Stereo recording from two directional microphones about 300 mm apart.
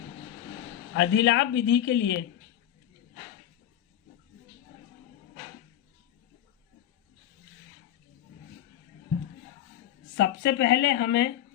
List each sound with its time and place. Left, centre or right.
0.9 s a man's voice: left
10.2 s a man's voice: left